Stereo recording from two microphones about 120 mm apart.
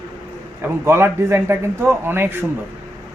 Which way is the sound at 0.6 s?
20° right (ahead or behind).